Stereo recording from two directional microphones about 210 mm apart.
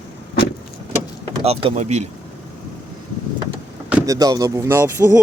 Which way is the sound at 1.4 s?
30° right (ahead or behind).